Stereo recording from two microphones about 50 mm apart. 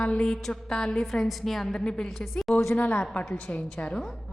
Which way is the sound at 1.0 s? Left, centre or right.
Centre.